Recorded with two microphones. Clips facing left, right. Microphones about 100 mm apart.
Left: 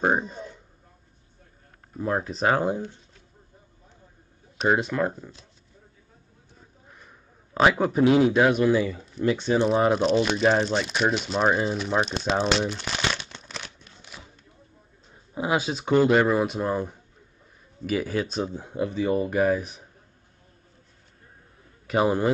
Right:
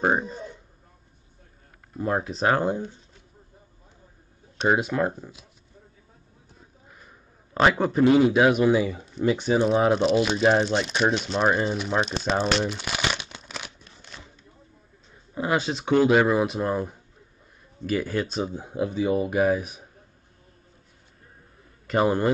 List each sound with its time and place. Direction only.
0.0 s speech: centre (ahead or behind)
2.0 s speech: 5° right (ahead or behind)
4.6 s speech: 5° right (ahead or behind)
6.9 s a sound: centre (ahead or behind)
8.6 s speech: 20° right (ahead or behind)
9.7 s speech: centre (ahead or behind)
15.3 s speech: 10° left (ahead or behind); by 19.8 s 10° right (ahead or behind)
21.8 s a man's voice: 5° left (ahead or behind)